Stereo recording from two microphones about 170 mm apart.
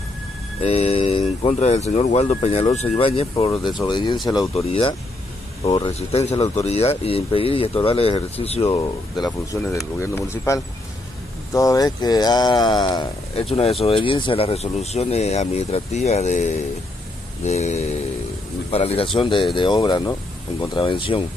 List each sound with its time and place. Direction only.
0.6 s speech: 35° left (ahead or behind)
9.2 s speech: 20° left (ahead or behind)